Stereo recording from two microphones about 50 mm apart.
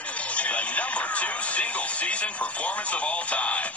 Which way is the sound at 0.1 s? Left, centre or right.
Left.